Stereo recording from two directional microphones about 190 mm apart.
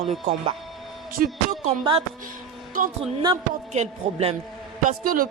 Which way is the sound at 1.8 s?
25° right (ahead or behind).